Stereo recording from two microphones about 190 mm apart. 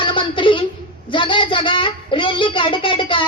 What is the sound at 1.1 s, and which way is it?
A woman's voice, 25° left (ahead or behind).